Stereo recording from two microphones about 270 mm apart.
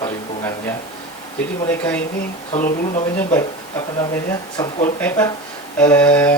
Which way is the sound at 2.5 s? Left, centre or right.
Left.